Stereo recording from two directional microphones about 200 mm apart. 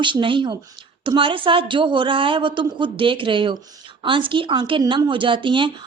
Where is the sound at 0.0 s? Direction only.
25° right (ahead or behind).